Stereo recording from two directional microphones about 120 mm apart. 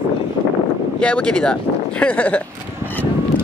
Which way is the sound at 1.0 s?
10° left (ahead or behind).